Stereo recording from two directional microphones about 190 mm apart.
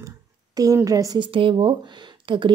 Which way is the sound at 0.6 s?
20° right (ahead or behind).